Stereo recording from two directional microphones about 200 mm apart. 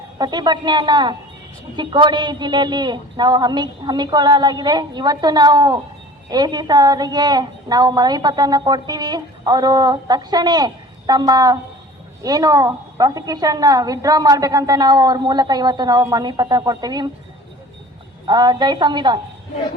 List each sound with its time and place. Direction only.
0.2 s a woman's voice: 20° right (ahead or behind)
18.3 s a woman's voice: 20° right (ahead or behind)